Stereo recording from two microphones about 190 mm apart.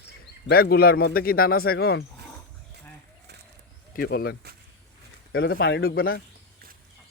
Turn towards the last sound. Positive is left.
turn(degrees=50)  # may be behind; listen again after turning